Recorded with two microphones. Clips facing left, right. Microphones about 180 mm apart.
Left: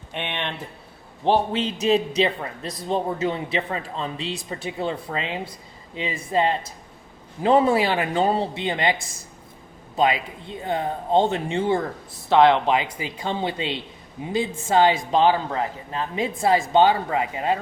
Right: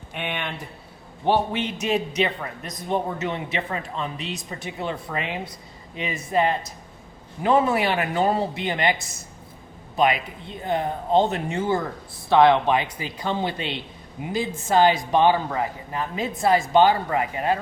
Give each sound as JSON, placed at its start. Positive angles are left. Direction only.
{"t": 0.2, "sound": "a sound", "side_deg": 25}
{"t": 1.2, "sound": "a man's voice", "side_deg": 30}
{"t": 10.6, "sound": "a man's voice", "side_deg": 25}